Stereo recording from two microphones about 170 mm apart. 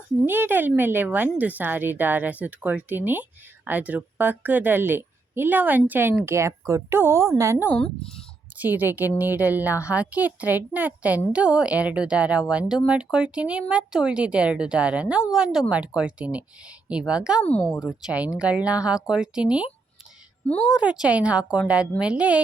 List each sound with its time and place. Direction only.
0.3 s a woman's voice: 10° right (ahead or behind)
17.4 s speech: 5° left (ahead or behind)
17.7 s a woman's voice: 5° right (ahead or behind)
20.8 s a woman's voice: 5° right (ahead or behind)